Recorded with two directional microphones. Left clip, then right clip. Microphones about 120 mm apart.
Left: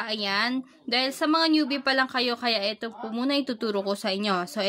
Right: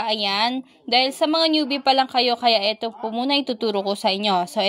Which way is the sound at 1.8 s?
20° right (ahead or behind).